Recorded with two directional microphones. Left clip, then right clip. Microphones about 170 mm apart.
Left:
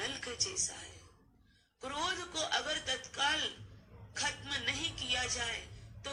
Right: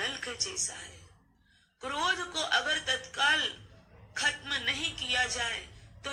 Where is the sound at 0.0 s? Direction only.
25° right (ahead or behind).